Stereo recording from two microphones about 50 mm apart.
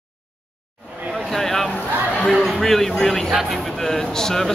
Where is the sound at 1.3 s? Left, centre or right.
Centre.